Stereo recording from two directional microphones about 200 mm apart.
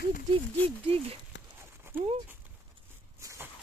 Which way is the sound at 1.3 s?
65° left (ahead or behind).